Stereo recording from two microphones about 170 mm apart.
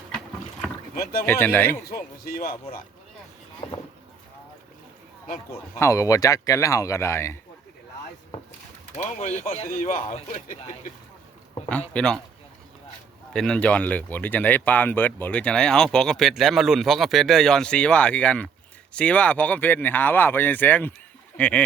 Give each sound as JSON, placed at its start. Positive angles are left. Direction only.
{"t": 1.2, "sound": "speech", "side_deg": 10}
{"t": 2.2, "sound": "speech", "side_deg": 60}
{"t": 3.6, "sound": "vehicle", "side_deg": 30}
{"t": 5.7, "sound": "speech", "side_deg": 15}
{"t": 9.0, "sound": "speech", "side_deg": 45}
{"t": 9.6, "sound": "speech", "side_deg": 55}
{"t": 10.0, "sound": "speech", "side_deg": 35}
{"t": 11.7, "sound": "speech", "side_deg": 5}
{"t": 13.3, "sound": "speech", "side_deg": 5}